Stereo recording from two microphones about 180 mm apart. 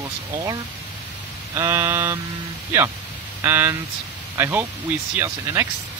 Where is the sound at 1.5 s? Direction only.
15° right (ahead or behind).